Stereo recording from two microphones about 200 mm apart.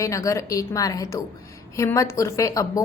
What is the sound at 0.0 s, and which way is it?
A woman's voice, 15° left (ahead or behind).